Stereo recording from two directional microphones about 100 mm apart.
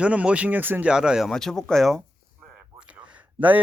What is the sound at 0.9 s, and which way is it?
Speech, 5° right (ahead or behind).